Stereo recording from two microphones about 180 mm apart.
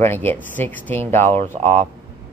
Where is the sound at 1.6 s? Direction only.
40° right (ahead or behind).